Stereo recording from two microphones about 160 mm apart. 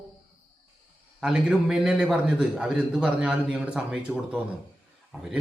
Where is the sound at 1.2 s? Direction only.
5° right (ahead or behind).